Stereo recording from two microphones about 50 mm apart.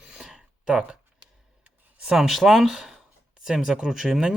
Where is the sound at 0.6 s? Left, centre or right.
Centre.